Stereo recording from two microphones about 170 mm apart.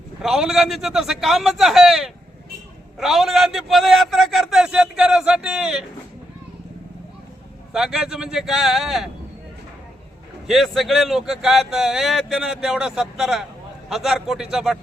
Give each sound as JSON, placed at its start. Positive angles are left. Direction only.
{"t": 0.2, "sound": "speech", "side_deg": 0}
{"t": 7.7, "sound": "speech", "side_deg": -5}
{"t": 10.4, "sound": "speech", "side_deg": 0}